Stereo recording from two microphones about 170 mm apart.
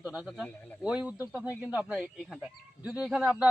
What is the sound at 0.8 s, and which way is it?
Speech, 5° right (ahead or behind).